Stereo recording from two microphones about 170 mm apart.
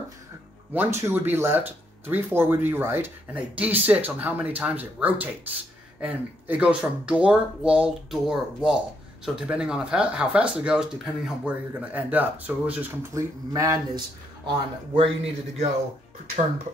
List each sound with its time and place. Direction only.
0.7 s speech: 15° right (ahead or behind)
13.5 s a man's voice: 20° right (ahead or behind)